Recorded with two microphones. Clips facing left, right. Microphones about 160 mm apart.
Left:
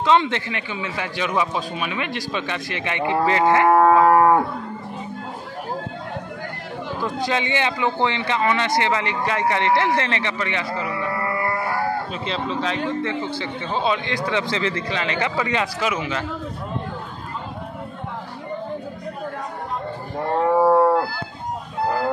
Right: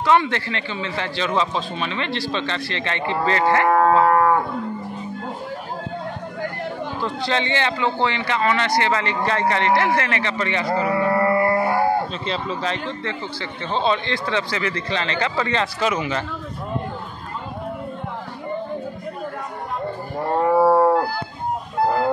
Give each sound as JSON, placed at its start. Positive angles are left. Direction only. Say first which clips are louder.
{"t": 0.0, "sound": "a man's voice", "louder": "even", "side_deg": 20}
{"t": 7.2, "sound": "a man's voice", "louder": "right 1 dB", "side_deg": 15}
{"t": 10.7, "sound": "a sound", "louder": "right 6 dB", "side_deg": -45}
{"t": 12.3, "sound": "a man's voice", "louder": "even", "side_deg": 0}
{"t": 13.0, "sound": "a man's voice", "louder": "left 3 dB", "side_deg": 15}
{"t": 14.9, "sound": "a man's voice", "louder": "even", "side_deg": 10}
{"t": 20.2, "sound": "wild animals", "louder": "right 1 dB", "side_deg": -5}